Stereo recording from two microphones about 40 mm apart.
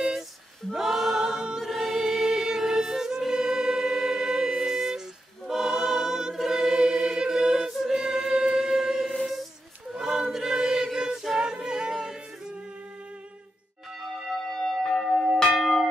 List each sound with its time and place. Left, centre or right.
0.7 s a capella: centre
1.6 s choir: centre
9.3 s a sound: centre
9.9 s choir: centre
11.2 s a capella: centre
14.5 s church bell: centre
15.5 s church bell: centre